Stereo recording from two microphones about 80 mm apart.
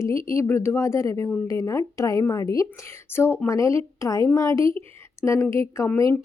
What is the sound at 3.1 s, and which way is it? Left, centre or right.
Speech, left.